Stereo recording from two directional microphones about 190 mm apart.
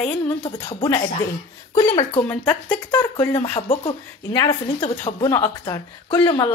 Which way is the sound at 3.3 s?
35° left (ahead or behind).